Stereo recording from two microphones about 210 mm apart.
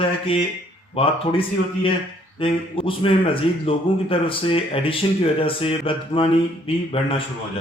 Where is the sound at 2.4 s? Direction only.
25° left (ahead or behind).